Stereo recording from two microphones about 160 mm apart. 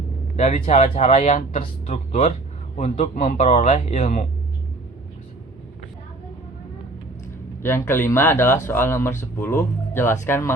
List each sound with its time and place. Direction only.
0.3 s speech: 40° left (ahead or behind)
3.2 s speech: 45° left (ahead or behind)
4.0 s speech: 55° left (ahead or behind)
7.6 s speech: 15° left (ahead or behind)